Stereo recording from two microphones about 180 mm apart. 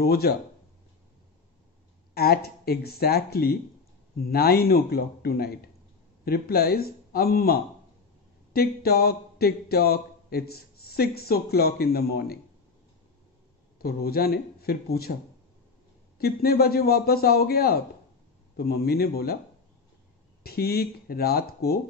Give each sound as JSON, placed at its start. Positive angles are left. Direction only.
{"t": 0.0, "sound": "speech", "side_deg": 60}
{"t": 2.1, "sound": "speech", "side_deg": 60}
{"t": 8.5, "sound": "speech", "side_deg": 60}
{"t": 13.7, "sound": "speech", "side_deg": 55}
{"t": 16.2, "sound": "speech", "side_deg": 60}
{"t": 20.4, "sound": "speech", "side_deg": 60}